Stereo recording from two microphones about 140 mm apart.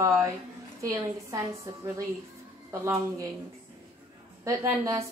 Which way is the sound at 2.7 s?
25° right (ahead or behind).